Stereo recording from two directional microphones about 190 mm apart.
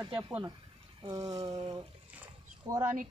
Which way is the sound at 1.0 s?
15° right (ahead or behind).